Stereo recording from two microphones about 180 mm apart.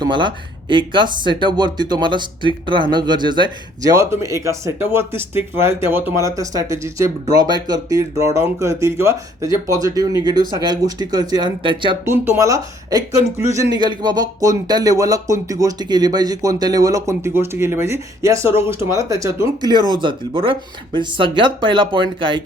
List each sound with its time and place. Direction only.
0.0 s a man's voice: 25° right (ahead or behind)
12.0 s a man's voice: 10° right (ahead or behind)